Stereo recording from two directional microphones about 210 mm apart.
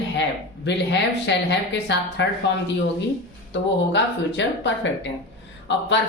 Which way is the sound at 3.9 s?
55° left (ahead or behind).